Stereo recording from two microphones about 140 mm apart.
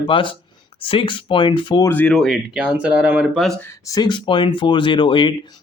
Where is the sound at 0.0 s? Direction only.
35° left (ahead or behind).